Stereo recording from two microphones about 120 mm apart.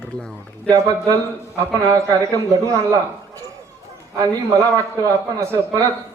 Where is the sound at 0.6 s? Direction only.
30° right (ahead or behind).